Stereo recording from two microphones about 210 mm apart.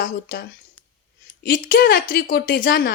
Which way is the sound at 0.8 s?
90° left.